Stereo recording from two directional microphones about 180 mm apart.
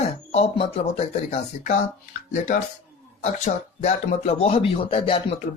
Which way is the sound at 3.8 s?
35° left (ahead or behind).